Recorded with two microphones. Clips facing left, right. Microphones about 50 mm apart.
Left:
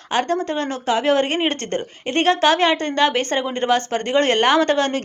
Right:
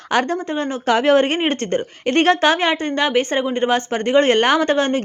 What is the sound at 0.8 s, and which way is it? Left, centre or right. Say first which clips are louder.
Speech: right 4 dB; right.